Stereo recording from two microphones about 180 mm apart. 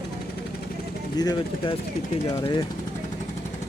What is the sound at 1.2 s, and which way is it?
Speech, 20° left (ahead or behind).